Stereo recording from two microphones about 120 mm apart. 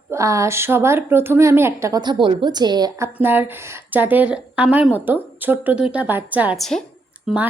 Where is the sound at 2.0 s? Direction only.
40° right (ahead or behind).